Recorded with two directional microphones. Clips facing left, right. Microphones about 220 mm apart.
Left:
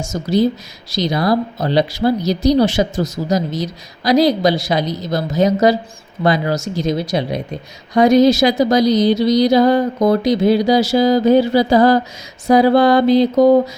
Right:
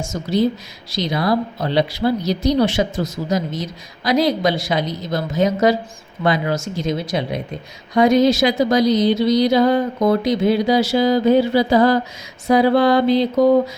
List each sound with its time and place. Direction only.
0.1 s speech: 40° left (ahead or behind)